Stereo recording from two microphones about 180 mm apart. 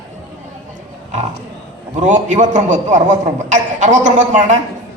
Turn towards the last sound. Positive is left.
turn(degrees=-40)  # may be behind; listen again after turning